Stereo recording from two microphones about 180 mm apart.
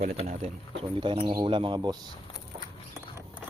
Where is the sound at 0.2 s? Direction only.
35° right (ahead or behind).